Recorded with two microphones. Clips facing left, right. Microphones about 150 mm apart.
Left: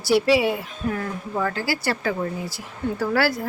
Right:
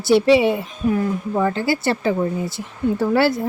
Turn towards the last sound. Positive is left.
turn(degrees=-20)  # may be behind; listen again after turning